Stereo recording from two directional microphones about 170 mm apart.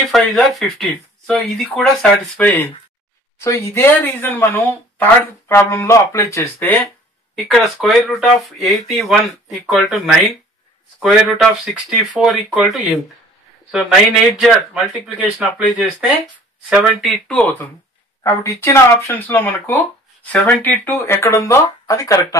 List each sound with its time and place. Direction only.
0.1 s speech: centre (ahead or behind)
7.4 s a man's voice: centre (ahead or behind); by 22.4 s 20° left (ahead or behind)